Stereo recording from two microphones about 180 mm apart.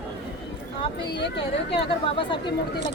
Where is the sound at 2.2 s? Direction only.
25° left (ahead or behind).